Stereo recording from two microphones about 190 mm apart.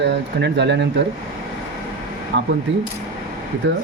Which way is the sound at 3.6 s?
75° right (ahead or behind).